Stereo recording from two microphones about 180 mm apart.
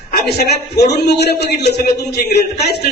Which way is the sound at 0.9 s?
70° left (ahead or behind).